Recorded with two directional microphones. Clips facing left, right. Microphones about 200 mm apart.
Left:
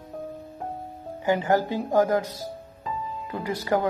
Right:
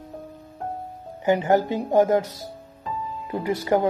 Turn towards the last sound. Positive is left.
turn(degrees=-20)  # may be behind; listen again after turning